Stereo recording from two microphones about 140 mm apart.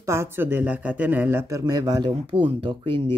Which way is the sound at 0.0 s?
20° right (ahead or behind).